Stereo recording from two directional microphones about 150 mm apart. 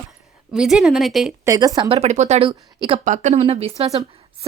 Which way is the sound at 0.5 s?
5° right (ahead or behind).